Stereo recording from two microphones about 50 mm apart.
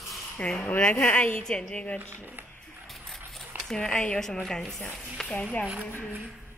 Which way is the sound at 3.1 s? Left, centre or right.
Centre.